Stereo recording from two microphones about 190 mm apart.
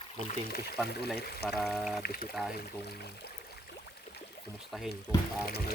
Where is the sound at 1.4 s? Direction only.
Centre (ahead or behind).